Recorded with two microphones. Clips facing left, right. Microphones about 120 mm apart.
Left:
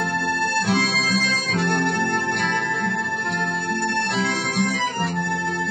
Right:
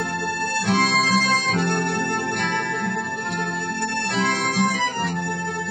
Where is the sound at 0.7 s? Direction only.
Centre (ahead or behind).